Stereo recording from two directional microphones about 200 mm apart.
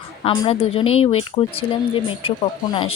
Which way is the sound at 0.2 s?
30° left (ahead or behind).